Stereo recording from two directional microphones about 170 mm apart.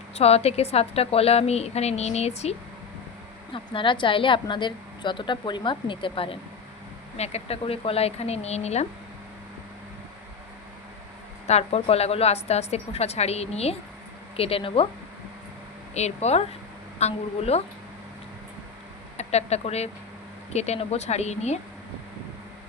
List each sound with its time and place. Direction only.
0.2 s a woman's voice: 35° left (ahead or behind)
11.4 s a woman's voice: 40° left (ahead or behind)
16.0 s a woman's voice: 40° left (ahead or behind)
19.1 s a woman's voice: 40° left (ahead or behind)